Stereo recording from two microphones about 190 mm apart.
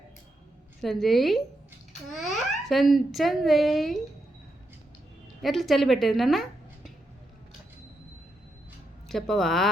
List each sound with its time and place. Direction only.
0.8 s a woman's voice: centre (ahead or behind)
5.4 s a woman's voice: centre (ahead or behind)
9.0 s a woman's voice: centre (ahead or behind)